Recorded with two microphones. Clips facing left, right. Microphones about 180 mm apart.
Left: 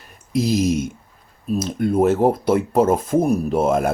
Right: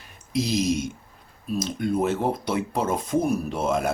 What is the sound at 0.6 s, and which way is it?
Speech, 50° left (ahead or behind).